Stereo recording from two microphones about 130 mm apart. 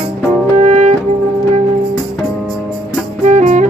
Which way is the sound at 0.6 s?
65° right (ahead or behind).